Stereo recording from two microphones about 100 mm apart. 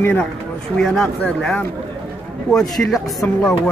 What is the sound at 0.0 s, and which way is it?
Speech, 15° left (ahead or behind).